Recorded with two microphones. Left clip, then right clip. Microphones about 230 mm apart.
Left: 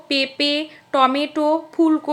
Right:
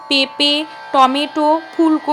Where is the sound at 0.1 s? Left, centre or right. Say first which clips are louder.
Right 5 dB; right.